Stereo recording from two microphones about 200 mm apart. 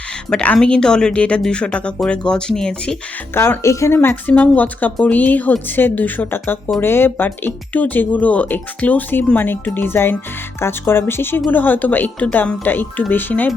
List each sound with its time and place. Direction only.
0.3 s speech: 5° left (ahead or behind)